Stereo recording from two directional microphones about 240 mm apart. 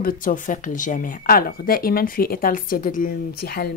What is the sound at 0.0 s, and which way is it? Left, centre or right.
Speech, left.